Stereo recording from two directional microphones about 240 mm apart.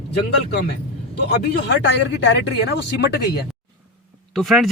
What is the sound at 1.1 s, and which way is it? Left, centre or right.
Speech, left.